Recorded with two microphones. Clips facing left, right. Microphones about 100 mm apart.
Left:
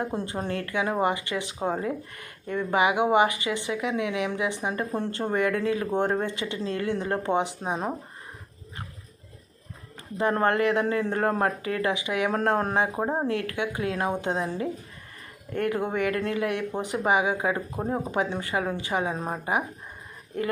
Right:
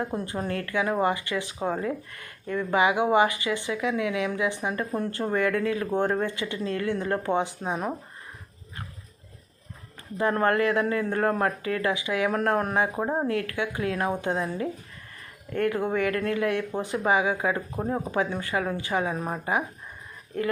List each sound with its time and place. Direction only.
0.0 s a woman's voice: 25° left (ahead or behind)
10.2 s a woman's voice: 25° left (ahead or behind)